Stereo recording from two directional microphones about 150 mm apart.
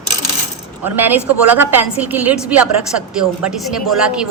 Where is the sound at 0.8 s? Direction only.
15° right (ahead or behind).